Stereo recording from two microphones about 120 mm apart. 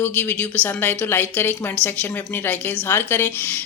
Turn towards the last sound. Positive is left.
turn(degrees=15)  # may be behind; listen again after turning